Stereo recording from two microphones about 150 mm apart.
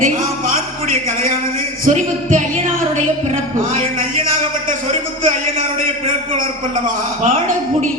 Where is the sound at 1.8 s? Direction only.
60° right (ahead or behind).